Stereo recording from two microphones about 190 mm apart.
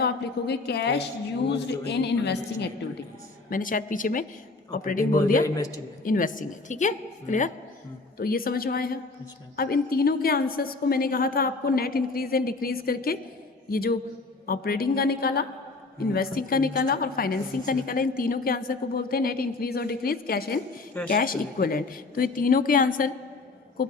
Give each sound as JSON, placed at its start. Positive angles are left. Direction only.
{"t": 0.0, "sound": "a woman's voice", "side_deg": 60}
{"t": 3.5, "sound": "a woman's voice", "side_deg": 45}
{"t": 5.5, "sound": "a man's voice", "side_deg": 20}
{"t": 6.1, "sound": "a woman's voice", "side_deg": 45}